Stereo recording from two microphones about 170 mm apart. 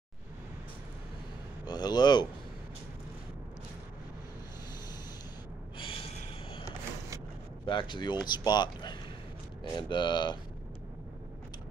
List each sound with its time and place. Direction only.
1.7 s speech: 25° left (ahead or behind)
7.6 s speech: 30° left (ahead or behind)